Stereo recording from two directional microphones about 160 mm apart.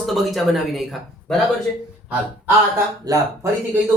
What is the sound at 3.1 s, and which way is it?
Speech, 25° right (ahead or behind).